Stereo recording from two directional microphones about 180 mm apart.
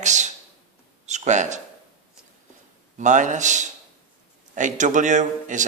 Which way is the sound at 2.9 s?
45° right (ahead or behind).